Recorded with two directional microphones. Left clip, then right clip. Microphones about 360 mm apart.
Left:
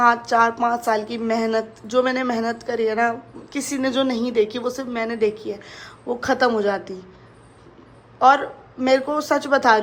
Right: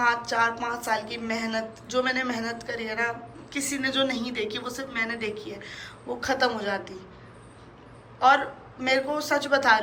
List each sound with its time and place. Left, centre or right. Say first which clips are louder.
0.2 s a woman's voice: left 7 dB; centre
8.8 s a woman's voice: left 6 dB; centre